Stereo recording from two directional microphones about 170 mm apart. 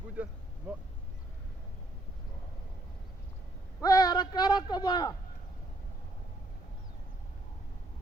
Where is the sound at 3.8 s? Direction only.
20° left (ahead or behind).